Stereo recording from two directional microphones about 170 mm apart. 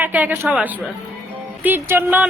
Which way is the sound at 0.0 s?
10° right (ahead or behind).